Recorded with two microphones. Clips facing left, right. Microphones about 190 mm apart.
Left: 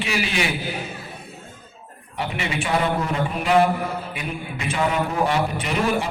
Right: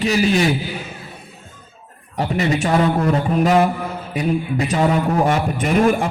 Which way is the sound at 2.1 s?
40° right (ahead or behind).